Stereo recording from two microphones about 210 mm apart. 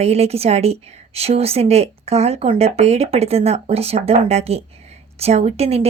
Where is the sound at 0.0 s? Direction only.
30° right (ahead or behind).